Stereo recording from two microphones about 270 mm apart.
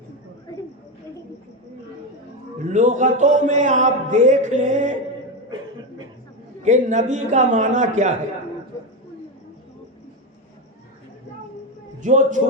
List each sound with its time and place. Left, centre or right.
2.6 s a man's voice: right
6.6 s a man's voice: right
12.0 s a man's voice: right